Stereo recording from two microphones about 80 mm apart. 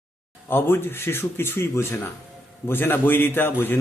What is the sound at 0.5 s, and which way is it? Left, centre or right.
A man's voice, left.